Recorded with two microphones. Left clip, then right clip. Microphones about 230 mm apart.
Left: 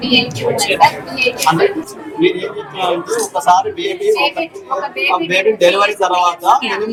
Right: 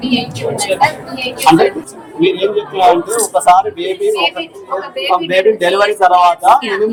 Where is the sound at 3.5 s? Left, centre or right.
Centre.